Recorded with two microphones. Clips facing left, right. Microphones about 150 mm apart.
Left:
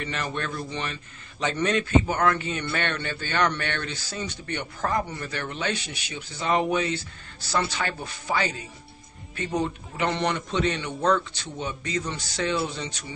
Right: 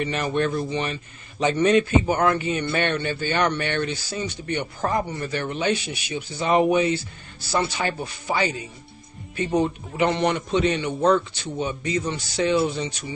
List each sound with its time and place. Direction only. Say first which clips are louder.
0.0 s speech: right 7 dB; 15° right (ahead or behind)
8.0 s speech: right 3 dB; 10° right (ahead or behind)
11.0 s speech: right 4 dB; 20° right (ahead or behind)
11.5 s speech: right 5 dB; 10° right (ahead or behind)